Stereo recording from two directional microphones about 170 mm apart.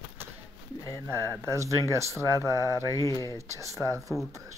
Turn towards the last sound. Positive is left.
turn(degrees=-20)  # may be behind; listen again after turning